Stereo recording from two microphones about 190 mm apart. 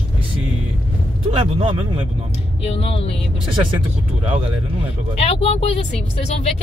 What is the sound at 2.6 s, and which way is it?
Speech, 30° left (ahead or behind).